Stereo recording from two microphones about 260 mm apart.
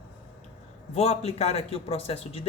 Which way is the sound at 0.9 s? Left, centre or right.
Left.